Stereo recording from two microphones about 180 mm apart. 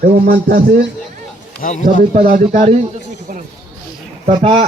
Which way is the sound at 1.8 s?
45° right (ahead or behind).